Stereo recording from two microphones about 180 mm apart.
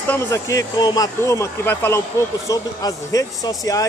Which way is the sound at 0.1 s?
15° left (ahead or behind).